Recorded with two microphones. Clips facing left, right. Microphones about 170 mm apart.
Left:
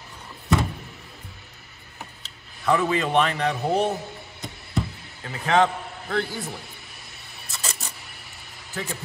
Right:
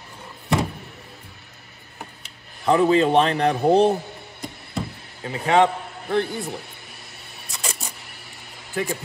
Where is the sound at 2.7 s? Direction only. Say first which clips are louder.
Right 5 dB; 30° right (ahead or behind).